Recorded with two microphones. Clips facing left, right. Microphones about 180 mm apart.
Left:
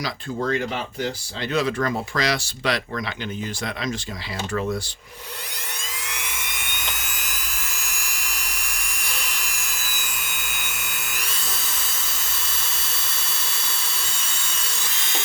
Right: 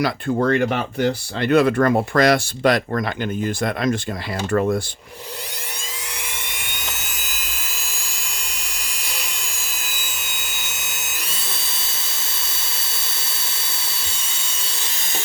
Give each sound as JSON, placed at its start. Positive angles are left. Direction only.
{"t": 0.0, "sound": "speech", "side_deg": -60}
{"t": 7.4, "sound": "dental drill", "side_deg": -25}
{"t": 9.4, "sound": "a sound", "side_deg": -25}
{"t": 11.0, "sound": "drill", "side_deg": -25}